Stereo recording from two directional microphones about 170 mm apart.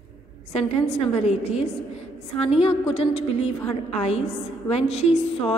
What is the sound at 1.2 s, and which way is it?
A woman's voice, 40° left (ahead or behind).